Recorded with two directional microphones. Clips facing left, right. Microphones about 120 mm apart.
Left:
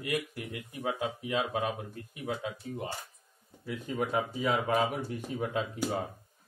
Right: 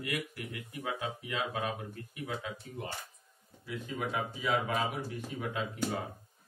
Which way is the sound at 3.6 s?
45° left (ahead or behind).